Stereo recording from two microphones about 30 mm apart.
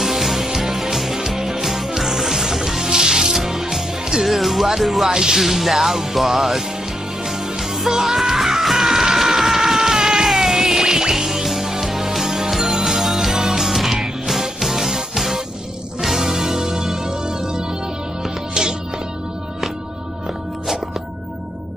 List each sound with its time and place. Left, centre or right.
0.0 s music: centre
2.9 s music: right
3.3 s music: centre
5.1 s music: centre
5.4 s music: centre
17.3 s music: centre